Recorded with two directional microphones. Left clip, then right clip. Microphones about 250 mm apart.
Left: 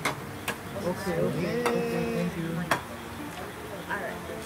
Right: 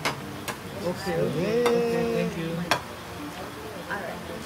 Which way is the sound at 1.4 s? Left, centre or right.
Centre.